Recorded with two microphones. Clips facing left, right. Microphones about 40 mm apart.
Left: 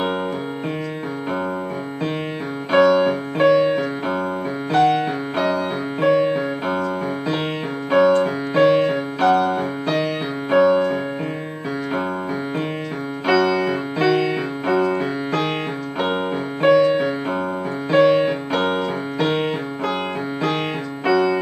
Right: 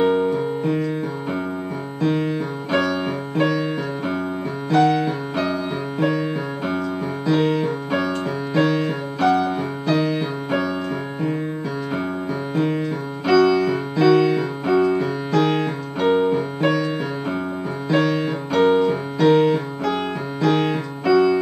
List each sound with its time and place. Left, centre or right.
2.7 s keyboard: left
3.5 s music: left
4.6 s music: centre
7.2 s keyboard: left
9.2 s music: left
10.6 s keyboard: left
13.3 s music: centre
15.0 s piano: centre
17.8 s music: left